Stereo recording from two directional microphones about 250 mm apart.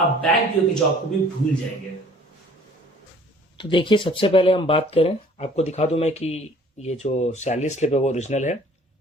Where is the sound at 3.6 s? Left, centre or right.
Centre.